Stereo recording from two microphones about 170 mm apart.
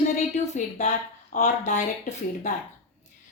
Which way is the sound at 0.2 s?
40° left (ahead or behind).